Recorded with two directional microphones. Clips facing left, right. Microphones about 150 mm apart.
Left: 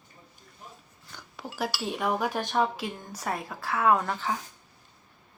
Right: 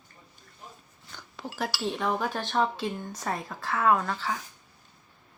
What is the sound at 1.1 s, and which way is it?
Speech, 5° left (ahead or behind).